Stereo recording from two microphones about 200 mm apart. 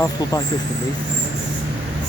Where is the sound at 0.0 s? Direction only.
15° left (ahead or behind).